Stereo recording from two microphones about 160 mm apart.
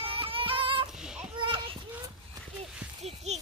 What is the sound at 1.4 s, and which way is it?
Children playing, 30° right (ahead or behind).